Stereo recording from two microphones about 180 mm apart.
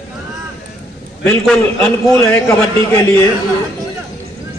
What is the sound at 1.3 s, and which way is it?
Speech, 5° left (ahead or behind).